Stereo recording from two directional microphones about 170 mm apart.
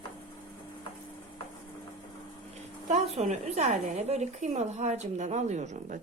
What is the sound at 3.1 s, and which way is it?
A woman's voice, 40° right (ahead or behind).